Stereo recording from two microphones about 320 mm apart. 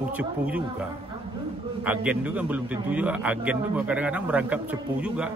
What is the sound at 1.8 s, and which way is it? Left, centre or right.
A man's voice, centre.